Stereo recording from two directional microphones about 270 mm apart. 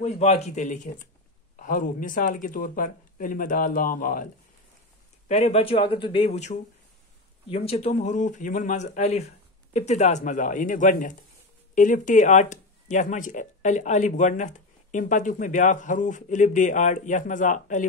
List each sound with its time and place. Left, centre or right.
0.0 s speech: left
5.3 s speech: left